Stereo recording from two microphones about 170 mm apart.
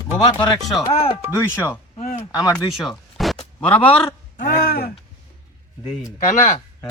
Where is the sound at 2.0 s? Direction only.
50° left (ahead or behind).